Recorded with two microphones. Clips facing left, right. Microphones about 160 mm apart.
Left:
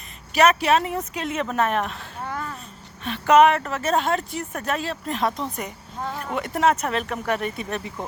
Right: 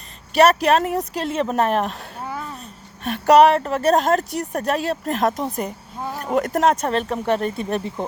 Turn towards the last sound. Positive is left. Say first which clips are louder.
# right 6 dB
turn(degrees=0)  # may be behind; listen again after turning